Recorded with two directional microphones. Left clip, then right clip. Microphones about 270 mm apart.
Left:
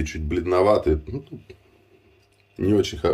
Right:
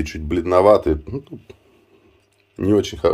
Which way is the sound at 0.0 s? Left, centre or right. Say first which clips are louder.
Right 4 dB; centre.